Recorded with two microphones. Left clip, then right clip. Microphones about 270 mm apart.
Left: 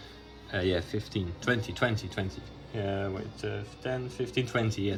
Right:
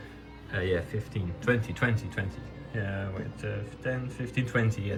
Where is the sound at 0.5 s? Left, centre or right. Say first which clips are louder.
Even; left.